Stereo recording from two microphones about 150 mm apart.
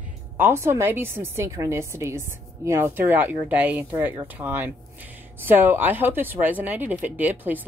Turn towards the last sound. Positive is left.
turn(degrees=-10)  # may be behind; listen again after turning